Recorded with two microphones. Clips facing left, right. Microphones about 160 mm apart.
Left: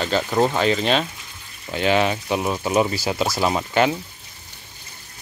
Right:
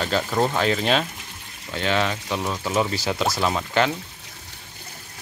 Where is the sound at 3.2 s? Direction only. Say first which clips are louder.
Left 2 dB; 10° left (ahead or behind).